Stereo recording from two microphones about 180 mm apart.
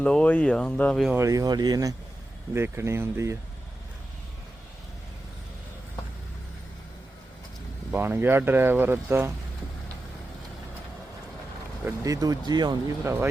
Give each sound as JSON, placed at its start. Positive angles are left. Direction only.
{"t": 0.0, "sound": "speech", "side_deg": 5}
{"t": 1.1, "sound": "speech", "side_deg": -15}
{"t": 7.9, "sound": "speech", "side_deg": -10}
{"t": 12.0, "sound": "speech", "side_deg": -20}